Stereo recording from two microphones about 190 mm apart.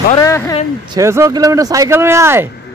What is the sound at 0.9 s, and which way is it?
Speech, 15° right (ahead or behind).